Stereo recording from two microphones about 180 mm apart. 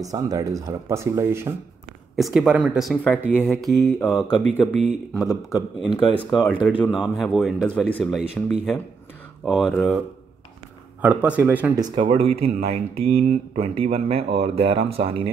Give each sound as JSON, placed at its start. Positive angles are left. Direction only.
{"t": 0.1, "sound": "speech", "side_deg": -20}
{"t": 2.1, "sound": "speech", "side_deg": 0}
{"t": 5.9, "sound": "speech", "side_deg": 25}
{"t": 6.3, "sound": "speech", "side_deg": 0}
{"t": 11.8, "sound": "speech", "side_deg": -30}